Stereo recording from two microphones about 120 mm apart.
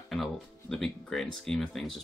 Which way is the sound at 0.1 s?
Centre (ahead or behind).